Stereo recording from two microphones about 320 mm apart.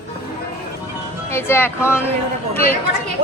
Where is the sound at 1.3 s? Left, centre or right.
Centre.